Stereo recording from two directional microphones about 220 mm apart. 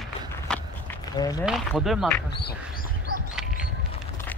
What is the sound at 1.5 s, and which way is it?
Speech, centre (ahead or behind).